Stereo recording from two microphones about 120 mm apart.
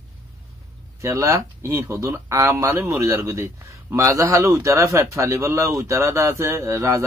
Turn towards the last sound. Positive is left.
turn(degrees=-25)  # may be behind; listen again after turning